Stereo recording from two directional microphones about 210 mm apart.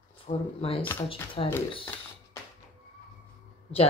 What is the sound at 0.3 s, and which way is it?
Speech, 30° left (ahead or behind).